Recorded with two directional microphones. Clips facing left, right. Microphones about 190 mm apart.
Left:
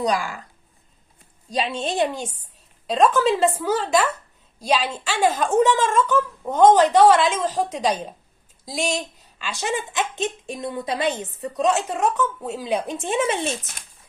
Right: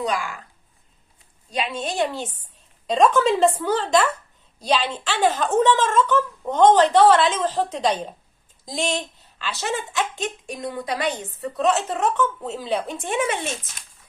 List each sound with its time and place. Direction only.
0.0 s speech: 40° left (ahead or behind)
1.5 s a woman's voice: 30° left (ahead or behind)
2.8 s speech: centre (ahead or behind); by 13.3 s 25° left (ahead or behind)